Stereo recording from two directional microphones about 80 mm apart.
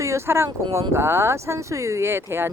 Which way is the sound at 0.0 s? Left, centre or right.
Right.